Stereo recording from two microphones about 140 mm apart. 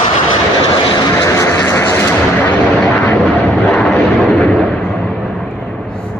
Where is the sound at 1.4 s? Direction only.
15° left (ahead or behind).